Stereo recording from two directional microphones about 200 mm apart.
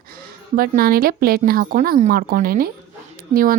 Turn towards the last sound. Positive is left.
turn(degrees=-45)  # may be behind; listen again after turning